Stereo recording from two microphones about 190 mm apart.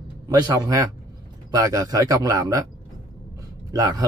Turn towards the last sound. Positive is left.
turn(degrees=-20)  # may be behind; listen again after turning